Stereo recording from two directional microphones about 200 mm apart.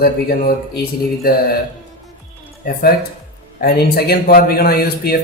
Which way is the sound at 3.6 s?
50° left (ahead or behind).